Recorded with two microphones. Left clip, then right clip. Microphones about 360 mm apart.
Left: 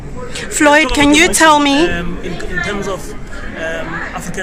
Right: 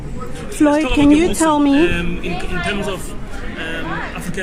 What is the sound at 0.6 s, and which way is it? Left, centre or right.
Speech, left.